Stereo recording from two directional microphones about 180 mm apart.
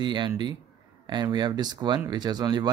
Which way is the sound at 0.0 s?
25° right (ahead or behind).